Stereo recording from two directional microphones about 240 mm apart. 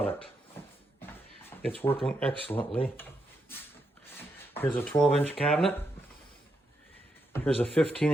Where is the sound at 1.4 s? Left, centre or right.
Centre.